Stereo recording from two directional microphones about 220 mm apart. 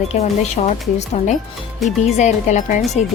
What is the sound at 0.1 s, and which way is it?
A woman's voice, 30° left (ahead or behind).